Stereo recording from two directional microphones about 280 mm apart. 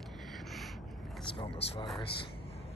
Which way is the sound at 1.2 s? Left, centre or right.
Centre.